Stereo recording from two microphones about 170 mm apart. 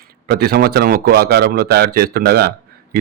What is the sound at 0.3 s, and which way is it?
Speech, 70° right (ahead or behind).